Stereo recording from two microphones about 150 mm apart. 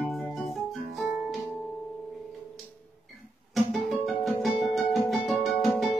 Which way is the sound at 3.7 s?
Centre (ahead or behind).